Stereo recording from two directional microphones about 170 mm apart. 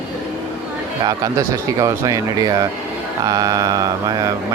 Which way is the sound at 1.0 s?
20° right (ahead or behind).